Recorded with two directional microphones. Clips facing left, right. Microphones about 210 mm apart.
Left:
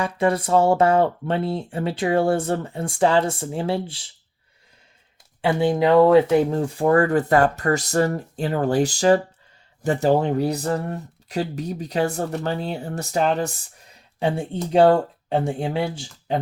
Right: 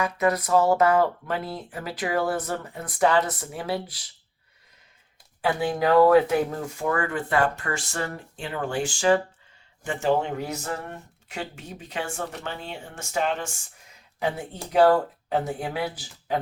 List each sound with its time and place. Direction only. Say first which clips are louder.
0.0 s speech: left 3 dB; 30° left (ahead or behind)
5.4 s speech: left 5 dB; 25° left (ahead or behind)